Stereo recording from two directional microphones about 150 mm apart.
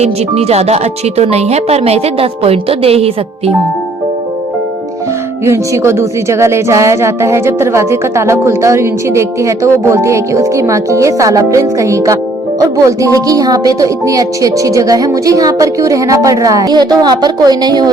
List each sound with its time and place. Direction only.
0.0 s speech: 45° right (ahead or behind)
5.5 s a woman's voice: 20° right (ahead or behind)